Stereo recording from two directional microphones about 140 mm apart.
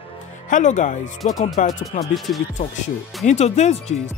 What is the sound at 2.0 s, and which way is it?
Speech, centre (ahead or behind).